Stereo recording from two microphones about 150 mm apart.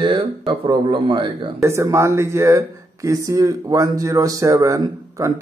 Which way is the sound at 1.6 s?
20° right (ahead or behind).